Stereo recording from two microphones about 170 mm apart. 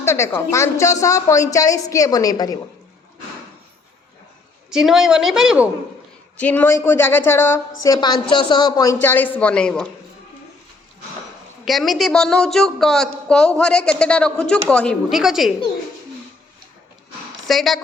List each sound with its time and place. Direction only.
0.0 s a woman's voice: 15° left (ahead or behind)
4.7 s speech: 5° right (ahead or behind)
6.3 s a woman's voice: 10° left (ahead or behind)
9.0 s a woman's voice: 10° left (ahead or behind)
11.6 s speech: centre (ahead or behind)
17.4 s speech: centre (ahead or behind)